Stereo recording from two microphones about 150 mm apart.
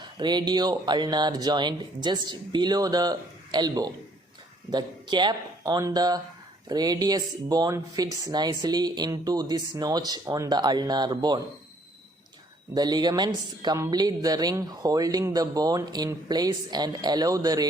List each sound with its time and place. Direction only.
0.2 s a woman's voice: 30° right (ahead or behind)
12.7 s a woman's voice: 25° right (ahead or behind)